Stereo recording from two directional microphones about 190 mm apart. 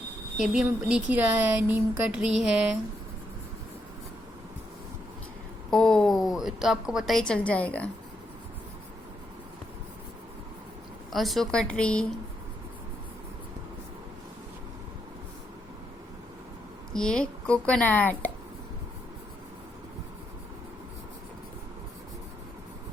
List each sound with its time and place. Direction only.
0.3 s speech: 5° right (ahead or behind)
5.7 s a woman's voice: 5° left (ahead or behind)
11.1 s speech: centre (ahead or behind)
16.9 s a woman's voice: 5° left (ahead or behind)